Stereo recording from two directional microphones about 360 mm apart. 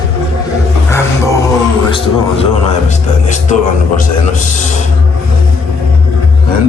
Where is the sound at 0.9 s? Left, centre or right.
Centre.